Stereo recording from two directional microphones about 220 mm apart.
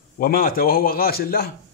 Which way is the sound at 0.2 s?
40° left (ahead or behind).